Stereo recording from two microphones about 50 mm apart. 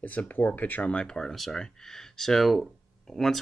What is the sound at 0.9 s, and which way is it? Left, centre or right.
Speech, centre.